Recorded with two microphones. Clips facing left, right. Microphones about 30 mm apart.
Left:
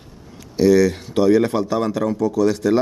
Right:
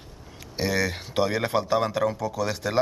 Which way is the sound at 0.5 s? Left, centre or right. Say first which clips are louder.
Left 11 dB; centre.